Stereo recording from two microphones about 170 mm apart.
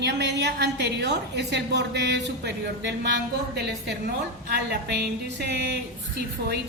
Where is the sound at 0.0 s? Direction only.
90° right.